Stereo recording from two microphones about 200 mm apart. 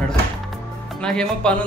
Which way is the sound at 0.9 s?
5° left (ahead or behind).